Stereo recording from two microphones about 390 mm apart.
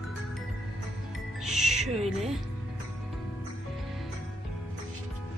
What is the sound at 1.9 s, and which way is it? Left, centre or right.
Speech, centre.